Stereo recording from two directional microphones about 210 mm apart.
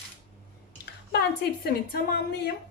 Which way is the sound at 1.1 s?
50° left (ahead or behind).